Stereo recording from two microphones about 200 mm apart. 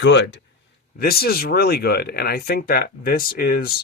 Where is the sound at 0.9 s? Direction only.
50° left (ahead or behind).